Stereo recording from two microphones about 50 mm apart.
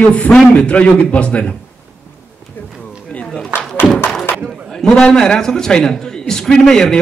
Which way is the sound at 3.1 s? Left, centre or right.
Left.